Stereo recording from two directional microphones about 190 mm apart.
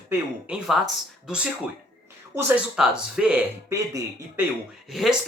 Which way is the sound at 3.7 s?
15° right (ahead or behind).